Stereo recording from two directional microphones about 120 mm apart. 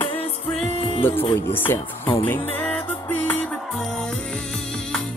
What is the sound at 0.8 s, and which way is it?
Music, 50° left (ahead or behind).